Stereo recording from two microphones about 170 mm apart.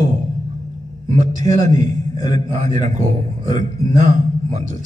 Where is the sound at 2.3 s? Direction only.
40° right (ahead or behind).